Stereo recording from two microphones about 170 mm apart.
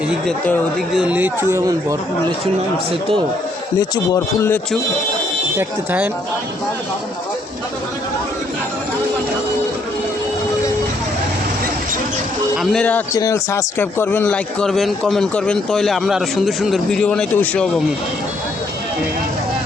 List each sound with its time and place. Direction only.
0.9 s speech: 10° right (ahead or behind)
3.8 s speech: 20° left (ahead or behind)
5.5 s speech: 10° right (ahead or behind)
12.7 s speech: 5° left (ahead or behind)
13.1 s speech: 20° left (ahead or behind)